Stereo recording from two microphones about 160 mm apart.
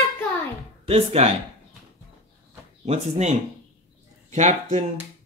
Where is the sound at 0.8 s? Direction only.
40° right (ahead or behind).